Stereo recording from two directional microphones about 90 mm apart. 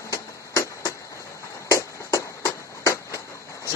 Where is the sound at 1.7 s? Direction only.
40° left (ahead or behind).